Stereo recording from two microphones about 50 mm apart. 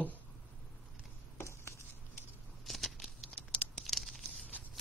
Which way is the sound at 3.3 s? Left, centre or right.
Centre.